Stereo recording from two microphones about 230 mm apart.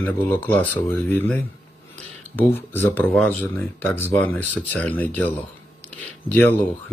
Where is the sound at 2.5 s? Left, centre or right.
Centre.